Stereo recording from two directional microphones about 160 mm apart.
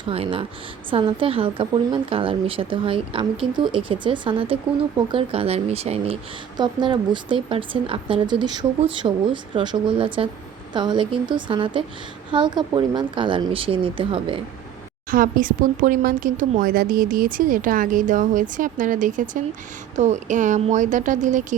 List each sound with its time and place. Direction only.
0.0 s a woman's voice: 35° right (ahead or behind)
6.6 s a woman's voice: 25° right (ahead or behind)
15.1 s a woman's voice: 60° right (ahead or behind)